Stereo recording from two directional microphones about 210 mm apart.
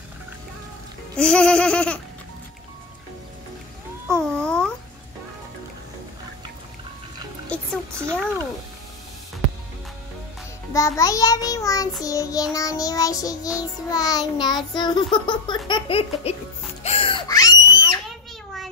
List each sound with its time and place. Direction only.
1.1 s laughter: 5° left (ahead or behind)
4.1 s speech: 5° left (ahead or behind)
7.4 s music: 5° left (ahead or behind)
10.7 s a child's voice: 15° left (ahead or behind)
13.6 s music: 15° left (ahead or behind)
16.8 s a sound: 25° left (ahead or behind)